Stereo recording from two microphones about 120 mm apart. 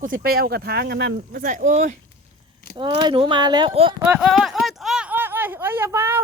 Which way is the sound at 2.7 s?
40° right (ahead or behind).